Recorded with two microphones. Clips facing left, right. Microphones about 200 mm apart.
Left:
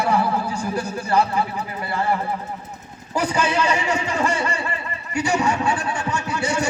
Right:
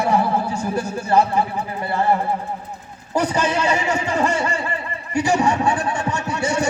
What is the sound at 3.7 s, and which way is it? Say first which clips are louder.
Speech: right 2 dB; 40° right (ahead or behind).